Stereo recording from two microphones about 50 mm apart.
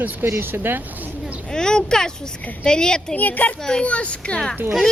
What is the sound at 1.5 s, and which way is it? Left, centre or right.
Speech, centre.